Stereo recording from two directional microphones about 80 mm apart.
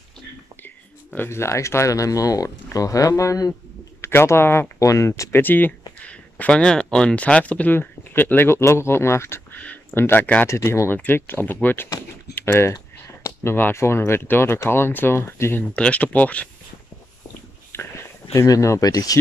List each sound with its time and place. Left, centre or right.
1.1 s speech: left
4.0 s speech: left
4.7 s speech: left
5.4 s speech: left
9.6 s a sound: centre
9.9 s speech: left
10.5 s speech: left
15.7 s speech: centre
17.7 s a sound: left
18.5 s speech: left